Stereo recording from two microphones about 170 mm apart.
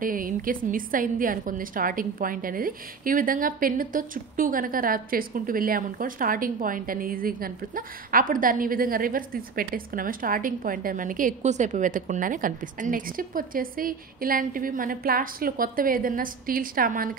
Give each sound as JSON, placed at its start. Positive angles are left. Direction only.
{"t": 0.0, "sound": "a woman's voice", "side_deg": -55}